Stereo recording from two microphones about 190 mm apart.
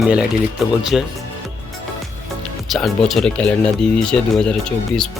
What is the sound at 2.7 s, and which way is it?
Speech, centre (ahead or behind).